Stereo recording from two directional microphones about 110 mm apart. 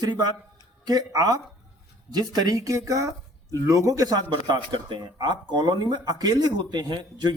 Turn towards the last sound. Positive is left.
turn(degrees=-40)  # may be behind; listen again after turning